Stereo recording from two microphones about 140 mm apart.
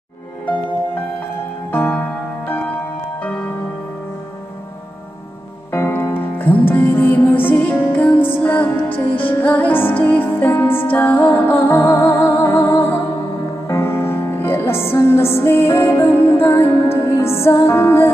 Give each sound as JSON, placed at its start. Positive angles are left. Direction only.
{"t": 1.7, "sound": "music", "side_deg": 10}
{"t": 5.7, "sound": "music", "side_deg": 15}